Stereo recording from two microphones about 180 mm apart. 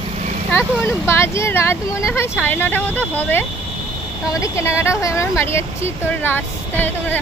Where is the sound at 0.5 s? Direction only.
15° left (ahead or behind).